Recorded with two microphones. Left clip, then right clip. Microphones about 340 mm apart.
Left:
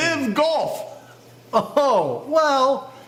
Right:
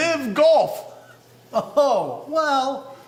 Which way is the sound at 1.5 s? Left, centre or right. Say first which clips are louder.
Left 1 dB; left.